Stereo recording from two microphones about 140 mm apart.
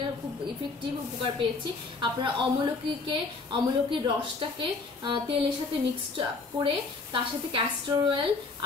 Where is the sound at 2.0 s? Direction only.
30° right (ahead or behind).